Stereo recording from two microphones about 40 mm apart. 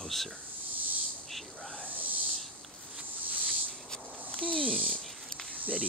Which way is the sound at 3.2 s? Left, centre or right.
Right.